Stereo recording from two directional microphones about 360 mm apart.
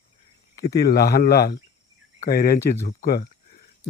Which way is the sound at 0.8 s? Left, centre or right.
Left.